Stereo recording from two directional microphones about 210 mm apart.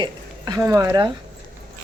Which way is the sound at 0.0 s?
20° right (ahead or behind).